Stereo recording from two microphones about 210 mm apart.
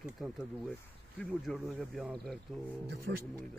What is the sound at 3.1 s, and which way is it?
Speech, 55° right (ahead or behind).